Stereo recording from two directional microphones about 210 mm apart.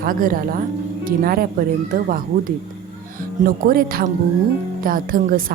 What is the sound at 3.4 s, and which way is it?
Speech, 45° right (ahead or behind).